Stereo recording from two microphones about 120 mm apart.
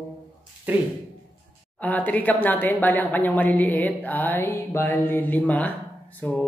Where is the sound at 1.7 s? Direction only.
15° left (ahead or behind).